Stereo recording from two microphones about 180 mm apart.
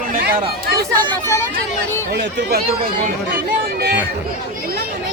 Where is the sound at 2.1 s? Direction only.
65° right (ahead or behind).